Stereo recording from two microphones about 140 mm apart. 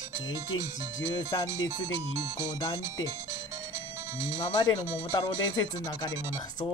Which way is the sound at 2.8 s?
20° right (ahead or behind).